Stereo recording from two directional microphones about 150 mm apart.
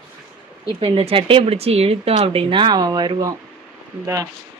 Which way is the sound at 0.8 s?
40° right (ahead or behind).